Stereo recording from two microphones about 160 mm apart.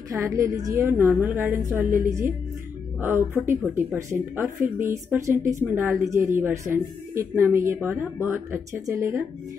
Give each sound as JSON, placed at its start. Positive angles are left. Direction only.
{"t": 0.1, "sound": "speech", "side_deg": -15}